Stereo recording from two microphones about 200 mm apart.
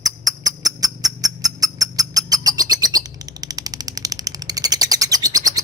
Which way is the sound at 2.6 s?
20° right (ahead or behind).